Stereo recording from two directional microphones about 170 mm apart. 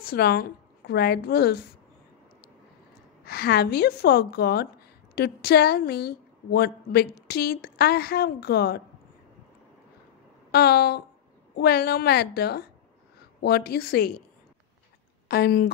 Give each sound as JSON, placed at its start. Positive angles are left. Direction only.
{"t": 0.0, "sound": "a woman's voice", "side_deg": 65}
{"t": 3.3, "sound": "a woman's voice", "side_deg": 65}
{"t": 10.5, "sound": "a woman's voice", "side_deg": 70}
{"t": 15.2, "sound": "speech", "side_deg": 65}